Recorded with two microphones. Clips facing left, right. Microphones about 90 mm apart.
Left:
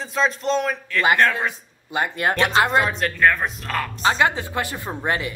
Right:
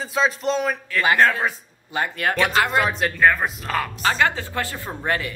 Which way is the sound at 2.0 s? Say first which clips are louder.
Left 1 dB; 20° left (ahead or behind).